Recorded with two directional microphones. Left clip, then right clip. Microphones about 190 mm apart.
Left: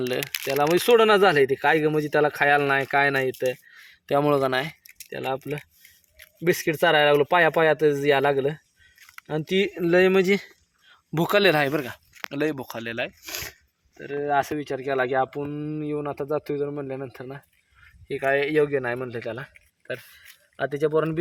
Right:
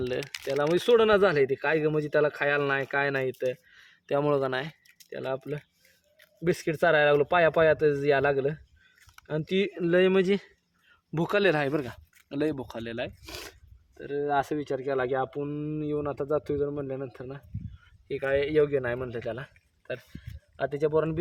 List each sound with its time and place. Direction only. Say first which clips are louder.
0.0 s speech: left 4 dB; 30° left (ahead or behind)
0.3 s speech: left 4 dB; 5° right (ahead or behind)
0.6 s speech: left 4 dB; 20° left (ahead or behind)
20.6 s speech: left 3 dB; 30° left (ahead or behind)